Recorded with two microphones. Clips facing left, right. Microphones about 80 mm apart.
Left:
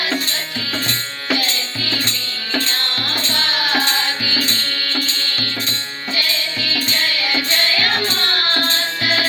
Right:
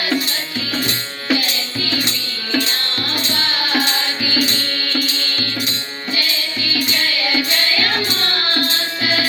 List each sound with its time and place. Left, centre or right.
0.9 s music: centre
6.7 s music: centre